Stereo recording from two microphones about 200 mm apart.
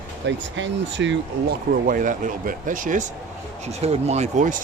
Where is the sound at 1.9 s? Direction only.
40° right (ahead or behind).